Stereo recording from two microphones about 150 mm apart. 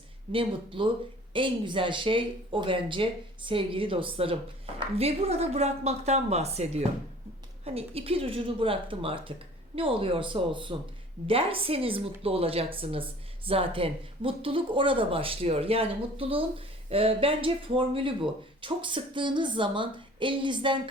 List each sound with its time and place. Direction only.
0.3 s speech: 35° right (ahead or behind)